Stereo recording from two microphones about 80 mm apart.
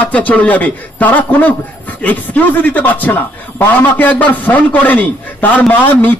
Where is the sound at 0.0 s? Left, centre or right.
Centre.